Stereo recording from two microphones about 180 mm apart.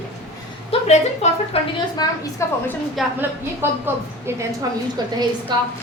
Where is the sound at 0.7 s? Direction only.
40° left (ahead or behind).